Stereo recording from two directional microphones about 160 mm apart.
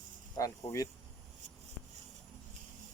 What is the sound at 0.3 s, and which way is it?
Speech, 20° left (ahead or behind).